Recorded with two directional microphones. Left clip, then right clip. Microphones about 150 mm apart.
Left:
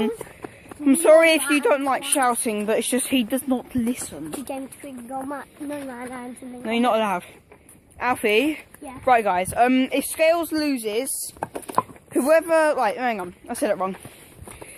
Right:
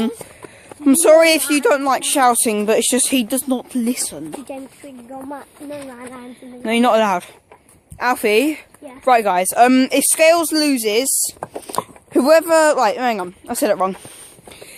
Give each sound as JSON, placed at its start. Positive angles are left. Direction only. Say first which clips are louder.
{"t": 0.9, "sound": "speech", "louder": "right 4 dB", "side_deg": -30}
{"t": 4.5, "sound": "speech", "louder": "left 1 dB", "side_deg": 75}
{"t": 6.7, "sound": "speech", "louder": "right 6 dB", "side_deg": -45}
{"t": 7.9, "sound": "speech", "louder": "right 5 dB", "side_deg": -30}
{"t": 12.1, "sound": "speech", "louder": "right 6 dB", "side_deg": -50}